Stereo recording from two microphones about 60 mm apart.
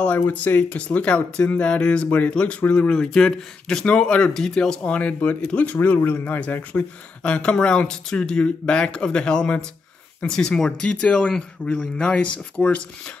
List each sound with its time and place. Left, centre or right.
0.0 s speech: left
5.8 s speech: left
7.2 s speech: centre